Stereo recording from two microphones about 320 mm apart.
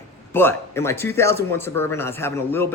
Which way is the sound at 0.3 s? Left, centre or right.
Centre.